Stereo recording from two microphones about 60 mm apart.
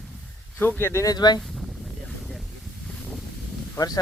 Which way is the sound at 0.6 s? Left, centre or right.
Left.